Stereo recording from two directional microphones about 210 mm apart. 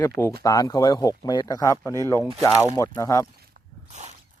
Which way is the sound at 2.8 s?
15° left (ahead or behind).